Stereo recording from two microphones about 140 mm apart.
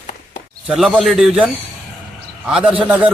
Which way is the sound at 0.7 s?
5° right (ahead or behind).